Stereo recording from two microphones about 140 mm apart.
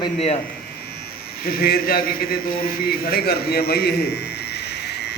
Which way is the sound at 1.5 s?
90° left.